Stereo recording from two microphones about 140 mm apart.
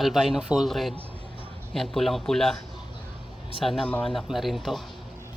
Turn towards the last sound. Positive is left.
turn(degrees=0)  # may be behind; listen again after turning